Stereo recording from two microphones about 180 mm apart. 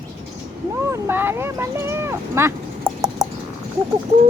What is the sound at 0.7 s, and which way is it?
Speech, 15° right (ahead or behind).